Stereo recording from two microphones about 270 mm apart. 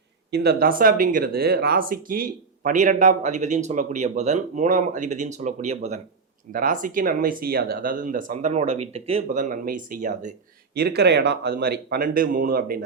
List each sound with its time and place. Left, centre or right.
0.3 s speech: right